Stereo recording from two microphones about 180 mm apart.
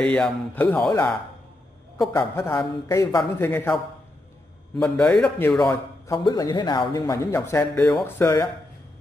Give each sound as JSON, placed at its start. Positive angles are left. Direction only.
{"t": 0.0, "sound": "speech", "side_deg": 5}
{"t": 2.0, "sound": "speech", "side_deg": 15}
{"t": 4.7, "sound": "speech", "side_deg": 5}
{"t": 6.1, "sound": "speech", "side_deg": 25}